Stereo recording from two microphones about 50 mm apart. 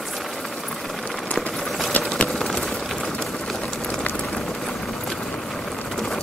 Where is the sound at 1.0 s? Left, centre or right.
Left.